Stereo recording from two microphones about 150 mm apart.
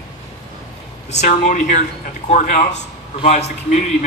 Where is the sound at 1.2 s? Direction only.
55° left (ahead or behind).